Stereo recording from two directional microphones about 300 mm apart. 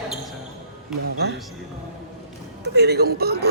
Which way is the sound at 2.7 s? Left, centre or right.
Right.